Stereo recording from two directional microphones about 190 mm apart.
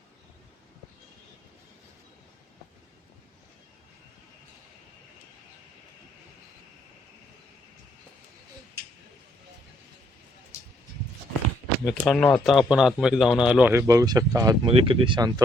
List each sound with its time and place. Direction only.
11.9 s speech: 5° left (ahead or behind); by 15.3 s 25° right (ahead or behind)